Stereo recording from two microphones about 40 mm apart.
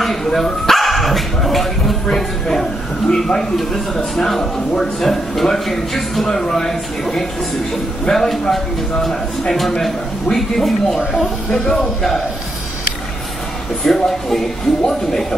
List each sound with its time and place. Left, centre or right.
0.0 s speech: centre
11.5 s speech: centre
13.8 s speech: centre